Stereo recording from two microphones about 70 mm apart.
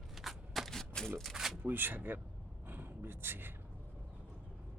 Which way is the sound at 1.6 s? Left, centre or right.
Right.